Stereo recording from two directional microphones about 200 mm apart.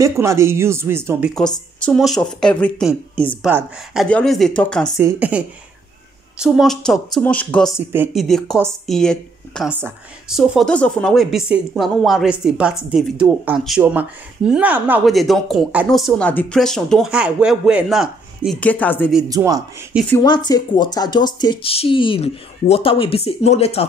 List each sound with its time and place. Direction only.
0.0 s speech: 15° right (ahead or behind)
1.3 s speech: 5° left (ahead or behind)
4.9 s speech: 10° right (ahead or behind); by 7.7 s 5° left (ahead or behind)
7.9 s speech: 5° right (ahead or behind)
9.7 s speech: 10° right (ahead or behind); by 19.0 s 10° left (ahead or behind)
19.2 s speech: 20° right (ahead or behind)
20.2 s speech: 20° left (ahead or behind)